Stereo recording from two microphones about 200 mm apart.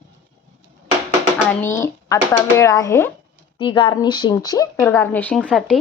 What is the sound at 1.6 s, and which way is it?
A woman's voice, 15° left (ahead or behind).